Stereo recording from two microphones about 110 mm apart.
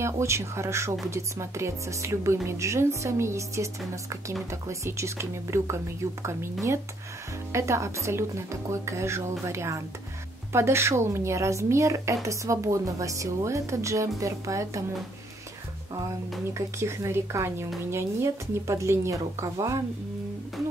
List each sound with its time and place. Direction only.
0.0 s speech: 25° right (ahead or behind)
16.5 s speech: 25° right (ahead or behind)